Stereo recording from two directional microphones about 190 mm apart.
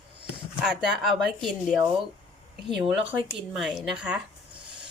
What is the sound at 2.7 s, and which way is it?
Speech, 5° right (ahead or behind).